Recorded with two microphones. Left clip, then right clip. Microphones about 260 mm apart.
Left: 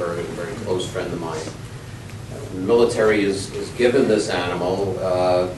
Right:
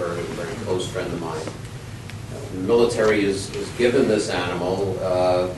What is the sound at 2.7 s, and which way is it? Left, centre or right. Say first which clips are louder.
A man's voice: left 2 dB; centre.